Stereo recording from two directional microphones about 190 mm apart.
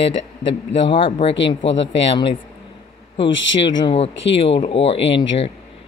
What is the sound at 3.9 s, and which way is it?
Speech, 30° left (ahead or behind).